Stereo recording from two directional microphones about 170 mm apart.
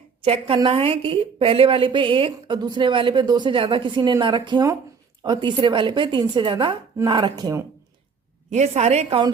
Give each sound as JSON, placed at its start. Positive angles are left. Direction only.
{"t": 0.2, "sound": "a woman's voice", "side_deg": -30}
{"t": 8.4, "sound": "a woman's voice", "side_deg": -40}